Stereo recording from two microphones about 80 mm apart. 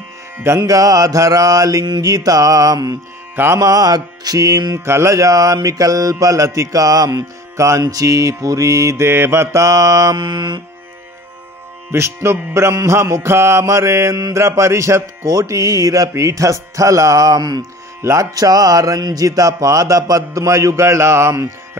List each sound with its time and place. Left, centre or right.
0.6 s mantra: right
4.7 s mantra: right
7.5 s music: right
7.8 s mantra: right
10.1 s mantra: right
11.9 s mantra: right
17.6 s mantra: right